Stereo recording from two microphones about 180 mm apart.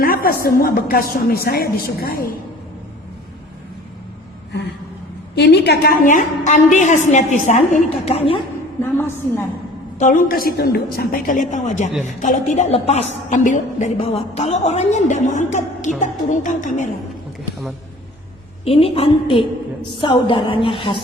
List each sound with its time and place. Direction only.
0.0 s a woman's voice: 55° left (ahead or behind)
5.3 s a woman's voice: 65° left (ahead or behind); by 8.4 s 35° left (ahead or behind)
8.8 s a woman's voice: 15° left (ahead or behind)
10.0 s a woman's voice: 45° left (ahead or behind)
18.6 s a woman's voice: 35° left (ahead or behind)